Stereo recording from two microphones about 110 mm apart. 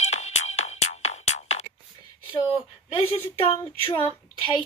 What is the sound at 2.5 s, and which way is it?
Speech, 60° left (ahead or behind).